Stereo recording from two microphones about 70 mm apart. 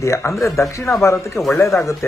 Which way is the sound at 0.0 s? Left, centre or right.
Left.